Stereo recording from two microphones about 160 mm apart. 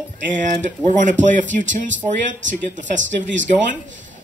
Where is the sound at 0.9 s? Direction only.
50° right (ahead or behind).